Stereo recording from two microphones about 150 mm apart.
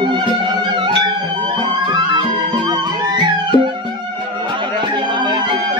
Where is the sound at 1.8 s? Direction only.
30° right (ahead or behind).